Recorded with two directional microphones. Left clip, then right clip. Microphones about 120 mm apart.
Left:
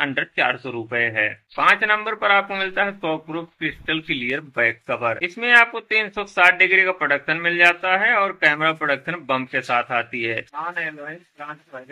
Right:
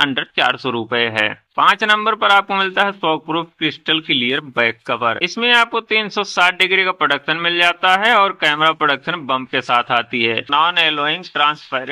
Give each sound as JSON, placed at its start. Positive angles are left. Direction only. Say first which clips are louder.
{"t": 0.0, "sound": "a man's voice", "louder": "right 5 dB", "side_deg": -45}